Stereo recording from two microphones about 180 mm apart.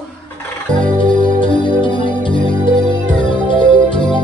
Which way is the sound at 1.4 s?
25° left (ahead or behind).